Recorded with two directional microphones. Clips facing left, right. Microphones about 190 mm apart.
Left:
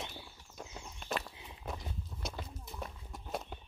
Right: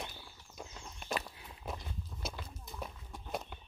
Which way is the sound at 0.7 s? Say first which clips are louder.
Left 2 dB; 10° left (ahead or behind).